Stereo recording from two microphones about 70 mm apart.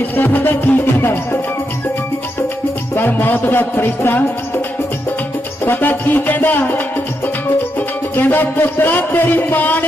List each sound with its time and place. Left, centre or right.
0.2 s music: left
2.9 s music: left
5.6 s music: left